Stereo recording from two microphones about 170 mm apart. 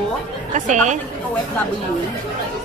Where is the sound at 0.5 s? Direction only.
45° right (ahead or behind).